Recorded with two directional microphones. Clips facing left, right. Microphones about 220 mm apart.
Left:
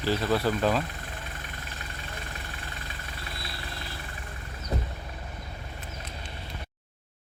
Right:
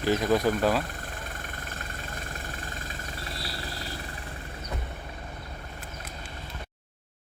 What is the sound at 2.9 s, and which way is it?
Vehicle, 35° right (ahead or behind).